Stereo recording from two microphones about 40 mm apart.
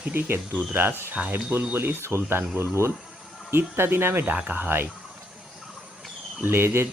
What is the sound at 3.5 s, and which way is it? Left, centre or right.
Speech, right.